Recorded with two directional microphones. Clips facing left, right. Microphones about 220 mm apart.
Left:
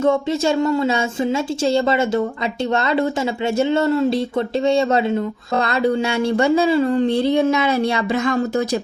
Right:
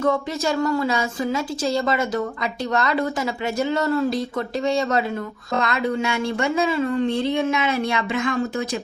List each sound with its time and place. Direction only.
0.0 s a woman's voice: 25° left (ahead or behind)